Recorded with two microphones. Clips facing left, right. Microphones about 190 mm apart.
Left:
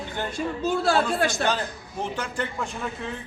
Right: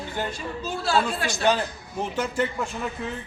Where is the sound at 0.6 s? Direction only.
55° left (ahead or behind).